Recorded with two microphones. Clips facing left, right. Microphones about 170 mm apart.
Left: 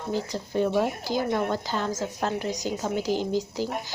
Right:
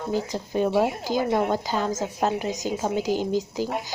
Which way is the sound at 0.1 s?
15° right (ahead or behind).